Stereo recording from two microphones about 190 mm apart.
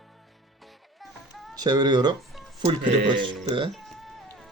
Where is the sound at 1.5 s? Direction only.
20° right (ahead or behind).